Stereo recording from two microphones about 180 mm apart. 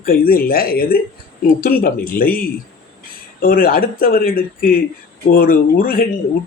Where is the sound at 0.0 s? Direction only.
55° left (ahead or behind).